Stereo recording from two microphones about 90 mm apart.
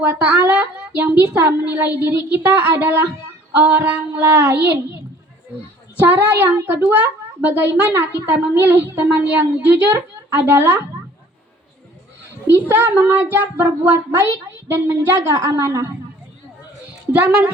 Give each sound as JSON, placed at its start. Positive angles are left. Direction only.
{"t": 0.1, "sound": "a woman's voice", "side_deg": -20}
{"t": 6.0, "sound": "a woman's voice", "side_deg": -20}
{"t": 12.5, "sound": "a woman's voice", "side_deg": -25}
{"t": 17.1, "sound": "a woman's voice", "side_deg": -20}